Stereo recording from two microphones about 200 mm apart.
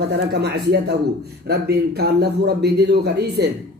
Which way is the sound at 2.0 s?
55° right (ahead or behind).